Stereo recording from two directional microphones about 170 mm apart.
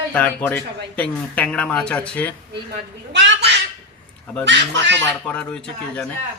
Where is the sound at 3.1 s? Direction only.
90° right.